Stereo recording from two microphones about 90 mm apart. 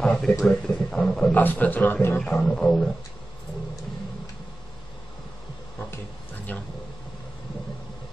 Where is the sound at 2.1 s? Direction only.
10° left (ahead or behind).